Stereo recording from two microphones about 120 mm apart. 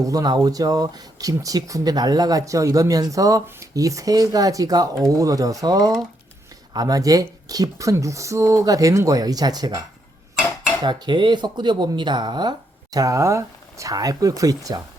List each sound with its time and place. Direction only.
0.0 s speech: 30° right (ahead or behind)
10.8 s speech: 40° right (ahead or behind)